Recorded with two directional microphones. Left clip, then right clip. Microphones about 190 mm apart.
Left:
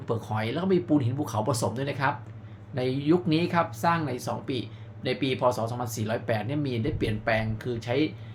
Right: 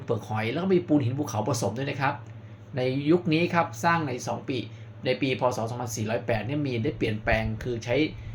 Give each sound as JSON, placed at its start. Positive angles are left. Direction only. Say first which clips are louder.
{"t": 0.1, "sound": "speech", "louder": "right 1 dB", "side_deg": 5}